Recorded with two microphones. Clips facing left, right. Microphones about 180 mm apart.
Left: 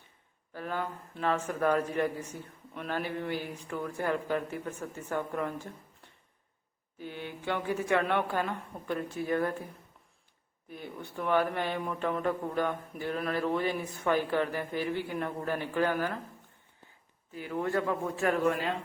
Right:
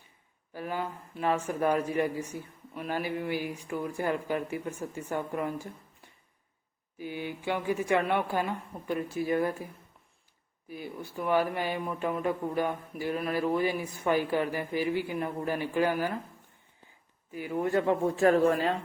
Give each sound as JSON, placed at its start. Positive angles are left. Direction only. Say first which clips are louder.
{"t": 0.5, "sound": "speech", "louder": "right 1 dB", "side_deg": -10}
{"t": 7.0, "sound": "speech", "louder": "right 3 dB", "side_deg": -10}
{"t": 10.7, "sound": "speech", "louder": "right 3 dB", "side_deg": -5}
{"t": 17.3, "sound": "a man's voice", "louder": "right 3 dB", "side_deg": -10}